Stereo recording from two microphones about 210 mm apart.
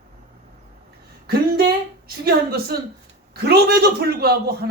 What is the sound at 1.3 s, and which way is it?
A man's voice, 45° right (ahead or behind).